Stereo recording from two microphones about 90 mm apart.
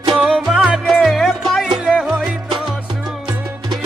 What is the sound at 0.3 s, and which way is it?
Music, centre (ahead or behind).